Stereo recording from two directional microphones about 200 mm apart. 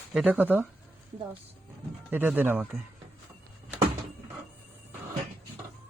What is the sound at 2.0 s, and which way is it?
Speech, 10° right (ahead or behind).